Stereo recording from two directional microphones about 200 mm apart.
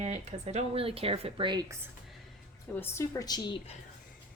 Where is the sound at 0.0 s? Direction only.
30° right (ahead or behind).